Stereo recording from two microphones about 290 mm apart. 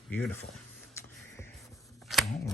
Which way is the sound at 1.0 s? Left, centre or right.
Centre.